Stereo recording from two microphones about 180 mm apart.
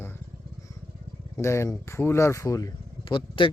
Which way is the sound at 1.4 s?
15° left (ahead or behind).